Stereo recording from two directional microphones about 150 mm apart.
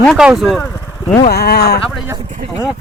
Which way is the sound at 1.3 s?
90° left.